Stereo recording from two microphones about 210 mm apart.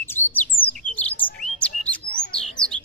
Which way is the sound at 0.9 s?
5° left (ahead or behind).